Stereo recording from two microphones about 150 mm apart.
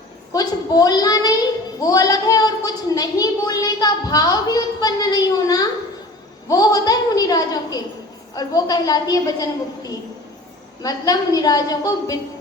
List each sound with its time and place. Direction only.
0.3 s a woman's voice: 25° left (ahead or behind)